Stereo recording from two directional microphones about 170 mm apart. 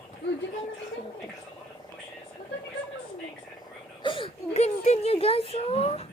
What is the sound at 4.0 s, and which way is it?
Whimper, 30° left (ahead or behind).